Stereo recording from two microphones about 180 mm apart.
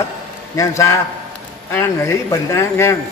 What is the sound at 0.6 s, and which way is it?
A man's voice, 15° left (ahead or behind).